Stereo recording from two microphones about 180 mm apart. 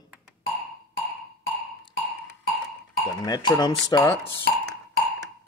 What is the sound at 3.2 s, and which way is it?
Speech, 25° left (ahead or behind).